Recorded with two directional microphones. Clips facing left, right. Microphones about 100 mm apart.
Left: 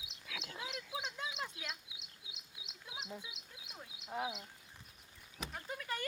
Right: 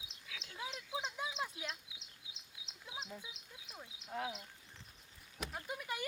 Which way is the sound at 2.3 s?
30° right (ahead or behind).